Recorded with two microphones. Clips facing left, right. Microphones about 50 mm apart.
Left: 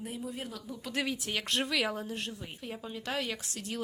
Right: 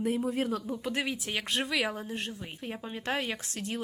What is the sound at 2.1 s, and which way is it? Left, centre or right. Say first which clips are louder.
Speech: right 2 dB; right.